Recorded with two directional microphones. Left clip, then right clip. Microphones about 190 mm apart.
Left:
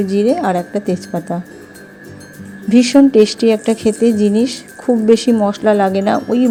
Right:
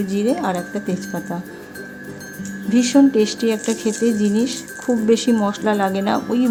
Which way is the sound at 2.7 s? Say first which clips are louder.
Left 5 dB; 25° left (ahead or behind).